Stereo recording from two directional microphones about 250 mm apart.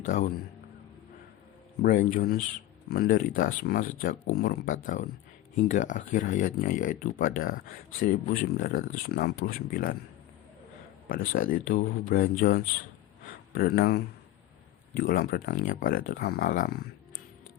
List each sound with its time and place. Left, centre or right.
0.0 s a man's voice: left
1.8 s speech: left
8.5 s speech: left
11.1 s speech: left
13.2 s a sound: left
14.9 s speech: left